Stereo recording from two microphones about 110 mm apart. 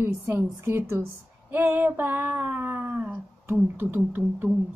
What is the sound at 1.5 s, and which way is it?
Female singing, 20° right (ahead or behind).